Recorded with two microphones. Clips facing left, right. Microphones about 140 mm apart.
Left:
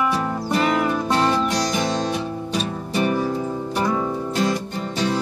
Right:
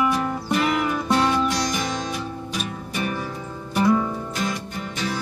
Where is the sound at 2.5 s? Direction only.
35° left (ahead or behind).